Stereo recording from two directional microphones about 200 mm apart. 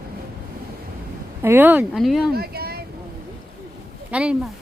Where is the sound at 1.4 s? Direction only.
10° right (ahead or behind).